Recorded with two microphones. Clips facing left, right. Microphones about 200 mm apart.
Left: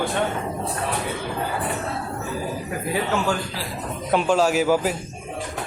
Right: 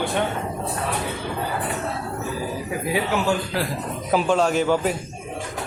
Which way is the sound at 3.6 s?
60° right (ahead or behind).